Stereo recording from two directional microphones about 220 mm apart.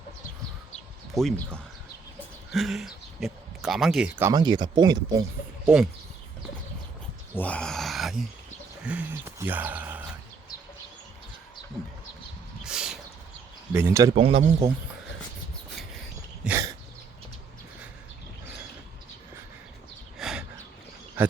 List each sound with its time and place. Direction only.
1.1 s speech: 5° left (ahead or behind); by 5.2 s 20° right (ahead or behind)
5.6 s speech: 5° right (ahead or behind)
7.3 s speech: 5° left (ahead or behind)
12.6 s a sound: 5° right (ahead or behind)
13.7 s speech: 15° right (ahead or behind)
14.2 s speech: 25° right (ahead or behind)
16.4 s throat clearing: 10° right (ahead or behind)
20.1 s a sound: centre (ahead or behind)